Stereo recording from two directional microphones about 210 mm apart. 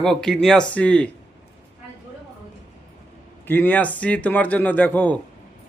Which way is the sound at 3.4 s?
10° left (ahead or behind).